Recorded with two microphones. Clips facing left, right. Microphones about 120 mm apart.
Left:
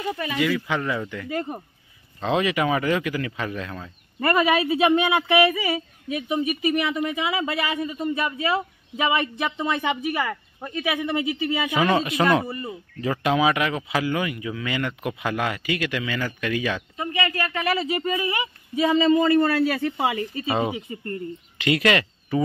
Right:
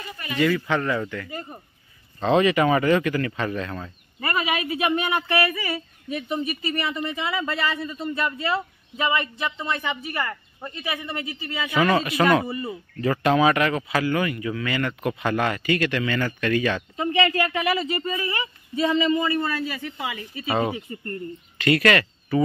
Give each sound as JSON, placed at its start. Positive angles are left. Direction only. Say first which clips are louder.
{"t": 0.4, "sound": "speech", "louder": "right 4 dB", "side_deg": 10}
{"t": 1.3, "sound": "speech", "louder": "left 7 dB", "side_deg": 70}
{"t": 2.1, "sound": "speech", "louder": "right 4 dB", "side_deg": 5}
{"t": 4.2, "sound": "speech", "louder": "left 6 dB", "side_deg": 45}
{"t": 4.6, "sound": "speech", "louder": "left 4 dB", "side_deg": 20}
{"t": 6.0, "sound": "speech", "louder": "left 2 dB", "side_deg": 5}
{"t": 12.4, "sound": "speech", "louder": "right 2 dB", "side_deg": -5}
{"t": 13.0, "sound": "speech", "louder": "right 2 dB", "side_deg": 10}
{"t": 16.9, "sound": "speech", "louder": "right 4 dB", "side_deg": -25}
{"t": 17.6, "sound": "speech", "louder": "even", "side_deg": 0}
{"t": 17.9, "sound": "speech", "louder": "left 2 dB", "side_deg": 10}
{"t": 19.1, "sound": "a man's voice", "louder": "left 5 dB", "side_deg": 45}
{"t": 19.4, "sound": "speech", "louder": "left 7 dB", "side_deg": 75}
{"t": 20.4, "sound": "speech", "louder": "right 2 dB", "side_deg": 15}